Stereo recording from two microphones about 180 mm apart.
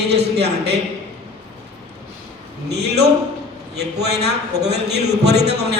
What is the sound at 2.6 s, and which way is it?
A man's voice, 65° right (ahead or behind).